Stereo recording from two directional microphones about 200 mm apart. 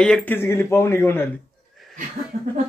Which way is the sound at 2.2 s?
45° right (ahead or behind).